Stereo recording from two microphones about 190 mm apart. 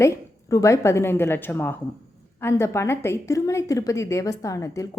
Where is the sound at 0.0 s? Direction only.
15° left (ahead or behind).